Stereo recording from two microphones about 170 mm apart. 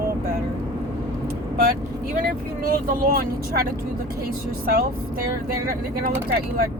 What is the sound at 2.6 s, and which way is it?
Speech, 60° right (ahead or behind).